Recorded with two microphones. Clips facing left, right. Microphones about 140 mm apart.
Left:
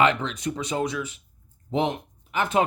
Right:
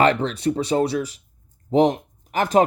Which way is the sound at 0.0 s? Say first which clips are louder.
Right 4 dB; 35° right (ahead or behind).